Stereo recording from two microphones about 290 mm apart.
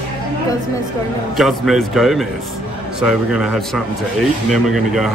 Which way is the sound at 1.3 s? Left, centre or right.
Centre.